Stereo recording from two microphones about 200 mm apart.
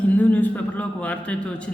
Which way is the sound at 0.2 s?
10° left (ahead or behind).